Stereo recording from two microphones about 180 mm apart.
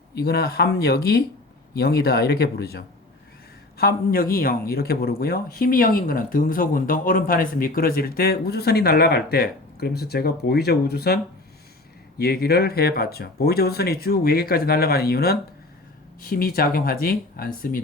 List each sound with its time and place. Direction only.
0.1 s speech: 60° left (ahead or behind)